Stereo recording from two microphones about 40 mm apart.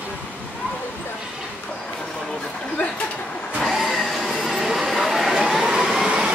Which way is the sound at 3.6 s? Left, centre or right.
Centre.